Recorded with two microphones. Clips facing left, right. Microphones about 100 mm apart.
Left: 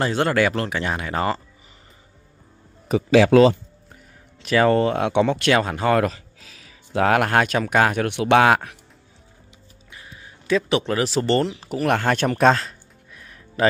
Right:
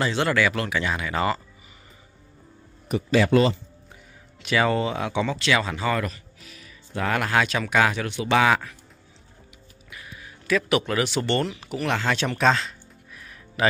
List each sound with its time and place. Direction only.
0.0 s speech: 45° left (ahead or behind)
3.1 s speech: 90° left
4.4 s speech: 40° left (ahead or behind)
8.1 s speech: 65° left (ahead or behind)
9.8 s speech: 30° left (ahead or behind); by 12.6 s 45° left (ahead or behind)